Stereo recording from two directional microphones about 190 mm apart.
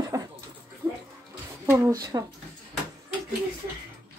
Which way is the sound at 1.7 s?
20° right (ahead or behind).